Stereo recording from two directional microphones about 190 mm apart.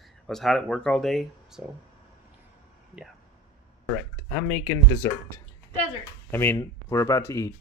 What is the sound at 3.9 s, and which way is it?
Speech, 5° left (ahead or behind).